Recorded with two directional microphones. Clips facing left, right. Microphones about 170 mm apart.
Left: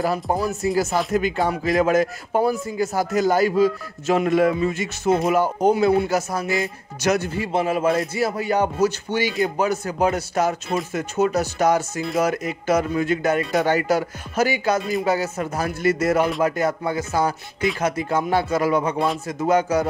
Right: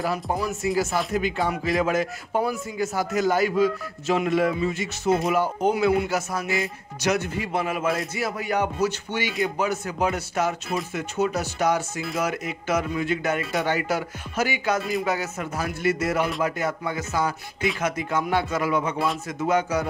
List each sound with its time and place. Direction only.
0.0 s speech: 40° left (ahead or behind)